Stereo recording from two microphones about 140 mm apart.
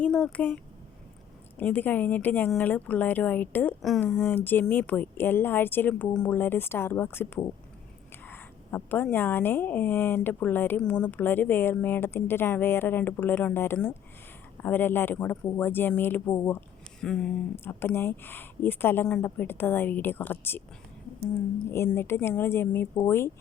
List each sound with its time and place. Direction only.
0.0 s speech: 5° left (ahead or behind)
3.8 s speech: centre (ahead or behind); by 16.6 s 20° left (ahead or behind)
17.0 s speech: 5° left (ahead or behind)
21.9 s speech: 15° left (ahead or behind)